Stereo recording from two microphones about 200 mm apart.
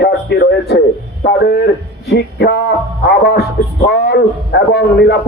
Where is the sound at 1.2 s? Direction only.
55° left (ahead or behind).